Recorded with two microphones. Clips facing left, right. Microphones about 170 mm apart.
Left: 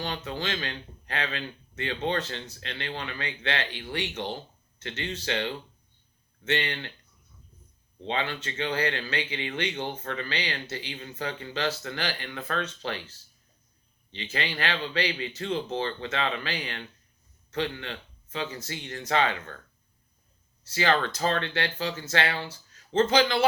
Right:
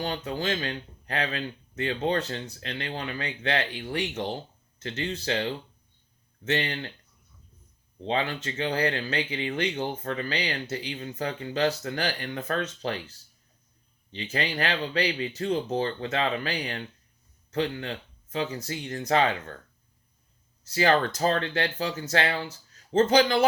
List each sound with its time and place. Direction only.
0.0 s speech: 40° right (ahead or behind)
8.0 s speech: 40° right (ahead or behind)
20.7 s speech: 40° right (ahead or behind)